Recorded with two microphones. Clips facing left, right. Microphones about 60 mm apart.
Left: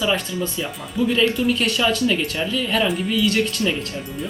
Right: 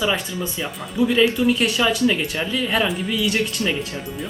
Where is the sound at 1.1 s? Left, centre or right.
Centre.